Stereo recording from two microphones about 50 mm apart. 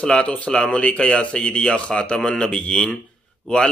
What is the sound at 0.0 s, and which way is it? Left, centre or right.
Mantra, left.